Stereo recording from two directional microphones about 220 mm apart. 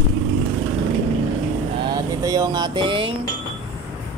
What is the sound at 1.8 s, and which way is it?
Vehicle, 15° right (ahead or behind).